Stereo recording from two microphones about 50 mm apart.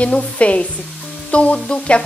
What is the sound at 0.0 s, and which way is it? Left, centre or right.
Speech, left.